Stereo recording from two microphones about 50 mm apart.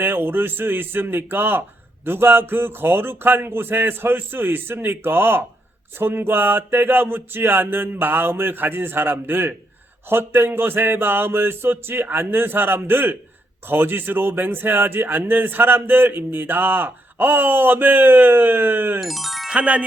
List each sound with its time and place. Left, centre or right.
0.0 s speech: right
18.9 s speech: centre
19.5 s wind chime: right